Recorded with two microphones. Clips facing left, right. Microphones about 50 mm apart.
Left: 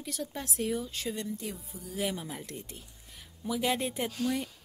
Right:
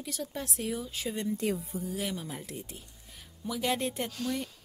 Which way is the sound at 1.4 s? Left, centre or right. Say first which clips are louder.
Right 9 dB; right.